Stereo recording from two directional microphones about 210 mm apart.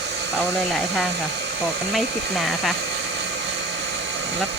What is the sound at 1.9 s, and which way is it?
Speech, centre (ahead or behind).